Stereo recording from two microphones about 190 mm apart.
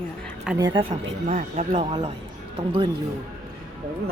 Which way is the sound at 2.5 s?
25° right (ahead or behind).